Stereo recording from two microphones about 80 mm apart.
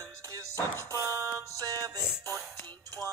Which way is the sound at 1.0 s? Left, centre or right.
Right.